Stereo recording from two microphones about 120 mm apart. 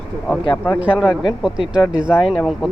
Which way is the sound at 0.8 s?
10° right (ahead or behind).